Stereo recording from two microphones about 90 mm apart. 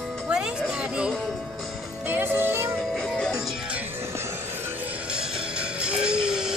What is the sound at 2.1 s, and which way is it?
Music, 25° right (ahead or behind).